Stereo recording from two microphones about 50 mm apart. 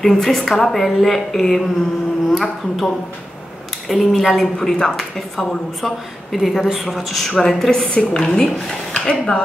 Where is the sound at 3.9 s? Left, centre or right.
Centre.